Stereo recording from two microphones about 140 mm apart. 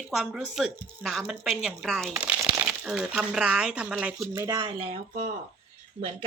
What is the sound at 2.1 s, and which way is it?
Speech, 10° right (ahead or behind).